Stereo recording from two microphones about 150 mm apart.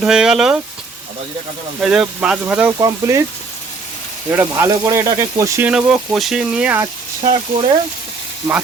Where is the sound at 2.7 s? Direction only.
20° right (ahead or behind).